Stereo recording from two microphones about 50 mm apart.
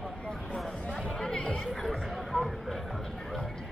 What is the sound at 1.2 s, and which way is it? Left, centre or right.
Chatter, centre.